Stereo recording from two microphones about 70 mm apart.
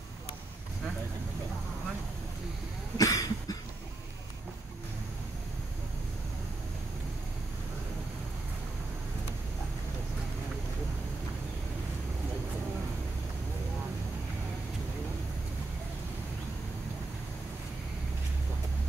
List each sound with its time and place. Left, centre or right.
3.0 s cough: left